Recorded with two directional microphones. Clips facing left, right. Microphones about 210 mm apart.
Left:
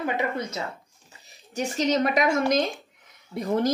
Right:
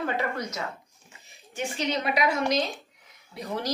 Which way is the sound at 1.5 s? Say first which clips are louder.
Left 5 dB; 40° left (ahead or behind).